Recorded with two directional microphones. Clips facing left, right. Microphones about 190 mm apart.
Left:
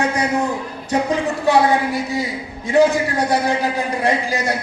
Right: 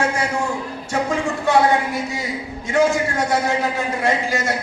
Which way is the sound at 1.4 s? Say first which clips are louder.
Left 1 dB; 20° left (ahead or behind).